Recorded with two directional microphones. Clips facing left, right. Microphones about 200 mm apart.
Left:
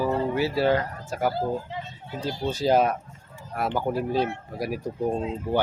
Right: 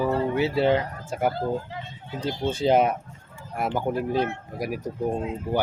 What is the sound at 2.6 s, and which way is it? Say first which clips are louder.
Speech: right 1 dB; 25° right (ahead or behind).